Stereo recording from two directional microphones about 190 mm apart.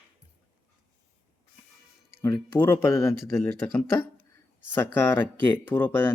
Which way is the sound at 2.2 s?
15° left (ahead or behind).